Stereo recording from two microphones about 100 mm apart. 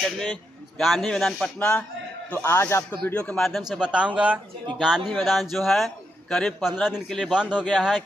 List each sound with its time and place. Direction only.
0.0 s a man's voice: 5° left (ahead or behind)
2.3 s speech: 20° left (ahead or behind)
3.4 s a man's voice: centre (ahead or behind)